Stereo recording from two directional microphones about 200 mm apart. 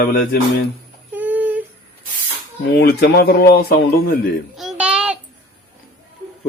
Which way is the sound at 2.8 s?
55° left (ahead or behind).